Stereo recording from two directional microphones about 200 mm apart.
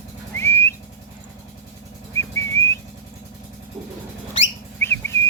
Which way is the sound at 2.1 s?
15° left (ahead or behind).